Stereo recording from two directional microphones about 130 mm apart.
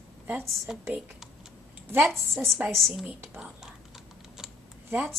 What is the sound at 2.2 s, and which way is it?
Speech, 20° right (ahead or behind).